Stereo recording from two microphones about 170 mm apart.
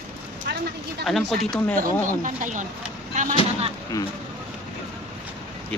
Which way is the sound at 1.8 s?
50° right (ahead or behind).